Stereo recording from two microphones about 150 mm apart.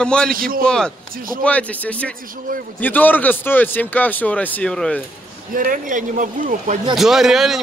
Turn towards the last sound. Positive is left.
turn(degrees=0)  # may be behind; listen again after turning